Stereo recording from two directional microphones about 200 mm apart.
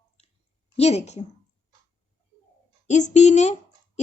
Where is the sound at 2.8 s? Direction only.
35° left (ahead or behind).